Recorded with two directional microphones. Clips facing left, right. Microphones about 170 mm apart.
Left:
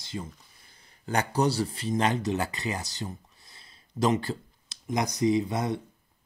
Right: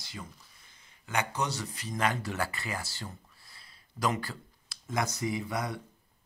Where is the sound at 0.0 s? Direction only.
25° left (ahead or behind).